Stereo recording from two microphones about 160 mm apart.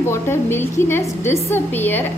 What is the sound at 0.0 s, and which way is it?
A woman's voice, 15° left (ahead or behind).